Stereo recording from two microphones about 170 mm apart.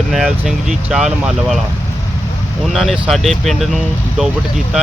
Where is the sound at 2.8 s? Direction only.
Centre (ahead or behind).